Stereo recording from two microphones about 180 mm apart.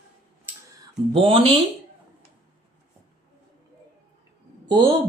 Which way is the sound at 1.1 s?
30° right (ahead or behind).